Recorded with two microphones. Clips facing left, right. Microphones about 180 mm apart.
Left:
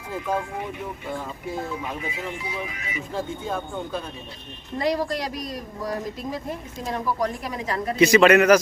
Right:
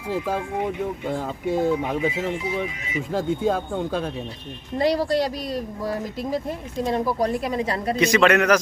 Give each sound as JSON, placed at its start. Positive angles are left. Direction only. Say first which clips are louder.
{"t": 1.1, "sound": "speech", "louder": "right 6 dB", "side_deg": -80}
{"t": 3.2, "sound": "speech", "louder": "right 7 dB", "side_deg": -75}
{"t": 4.8, "sound": "a woman's voice", "louder": "right 4 dB", "side_deg": -30}
{"t": 6.8, "sound": "a woman's voice", "louder": "right 3 dB", "side_deg": -35}
{"t": 7.9, "sound": "a man's voice", "louder": "left 3 dB", "side_deg": 5}